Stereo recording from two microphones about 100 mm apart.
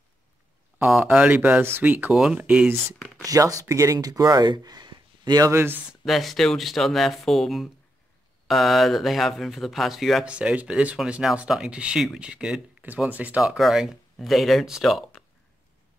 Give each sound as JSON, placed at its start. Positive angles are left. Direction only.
{"t": 1.0, "sound": "speech", "side_deg": -15}
{"t": 3.3, "sound": "speech", "side_deg": -35}
{"t": 5.5, "sound": "speech", "side_deg": -25}
{"t": 6.0, "sound": "speech", "side_deg": 0}
{"t": 10.2, "sound": "speech", "side_deg": -10}
{"t": 13.4, "sound": "a man's voice", "side_deg": -5}